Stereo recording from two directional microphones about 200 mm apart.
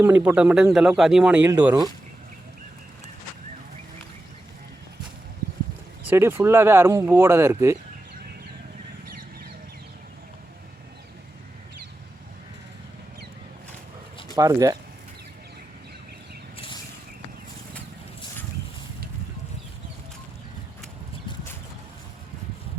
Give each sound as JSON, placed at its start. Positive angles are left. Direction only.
{"t": 0.0, "sound": "speech", "side_deg": -10}
{"t": 1.5, "sound": "speech", "side_deg": -15}
{"t": 6.1, "sound": "speech", "side_deg": -10}
{"t": 14.3, "sound": "speech", "side_deg": -15}
{"t": 16.6, "sound": "a sound", "side_deg": 25}